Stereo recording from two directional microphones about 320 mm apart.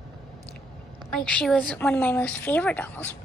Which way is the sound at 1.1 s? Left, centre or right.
Centre.